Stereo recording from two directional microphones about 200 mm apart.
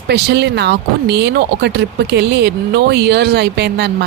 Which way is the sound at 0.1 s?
55° right (ahead or behind).